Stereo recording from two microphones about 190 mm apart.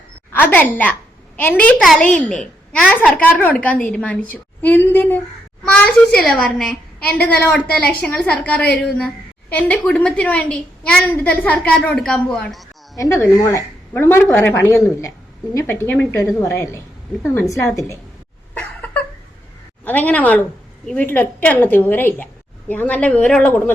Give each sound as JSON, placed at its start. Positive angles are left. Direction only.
{"t": 0.3, "sound": "a woman's voice", "side_deg": 10}
{"t": 2.0, "sound": "a child's voice", "side_deg": 40}
{"t": 2.3, "sound": "a woman's voice", "side_deg": 5}
{"t": 13.0, "sound": "a woman's voice", "side_deg": 15}
{"t": 18.5, "sound": "a sound", "side_deg": 5}
{"t": 19.8, "sound": "a woman's voice", "side_deg": 10}